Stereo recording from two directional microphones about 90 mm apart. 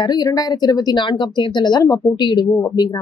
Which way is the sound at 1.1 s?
60° left (ahead or behind).